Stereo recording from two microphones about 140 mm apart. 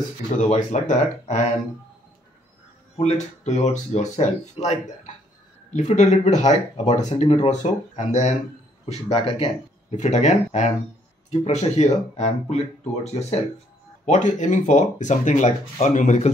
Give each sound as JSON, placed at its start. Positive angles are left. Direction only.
{"t": 0.4, "sound": "speech", "side_deg": 60}
{"t": 3.0, "sound": "speech", "side_deg": 55}
{"t": 9.1, "sound": "speech", "side_deg": 40}
{"t": 9.9, "sound": "speech", "side_deg": 55}